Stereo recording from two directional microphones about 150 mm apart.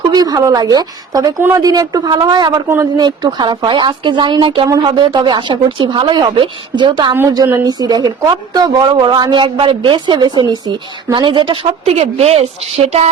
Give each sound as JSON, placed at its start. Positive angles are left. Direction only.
{"t": 0.1, "sound": "a woman's voice", "side_deg": -25}
{"t": 7.1, "sound": "a woman's voice", "side_deg": -20}